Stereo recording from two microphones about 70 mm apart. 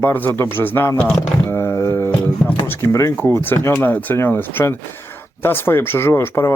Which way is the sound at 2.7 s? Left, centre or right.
Left.